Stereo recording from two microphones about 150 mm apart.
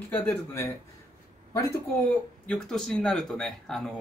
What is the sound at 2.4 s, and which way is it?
Speech, 5° left (ahead or behind).